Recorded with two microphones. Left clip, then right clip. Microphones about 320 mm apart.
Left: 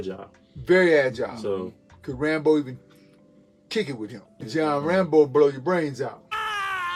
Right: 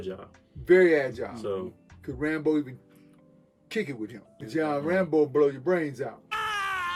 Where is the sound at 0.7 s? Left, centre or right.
Centre.